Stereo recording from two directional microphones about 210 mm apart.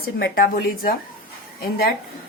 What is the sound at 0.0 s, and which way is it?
Speech, 45° left (ahead or behind).